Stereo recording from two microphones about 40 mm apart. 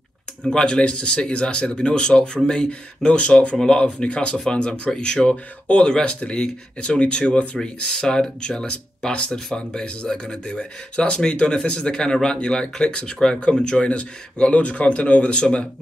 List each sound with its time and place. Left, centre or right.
0.4 s speech: centre
15.3 s speech: left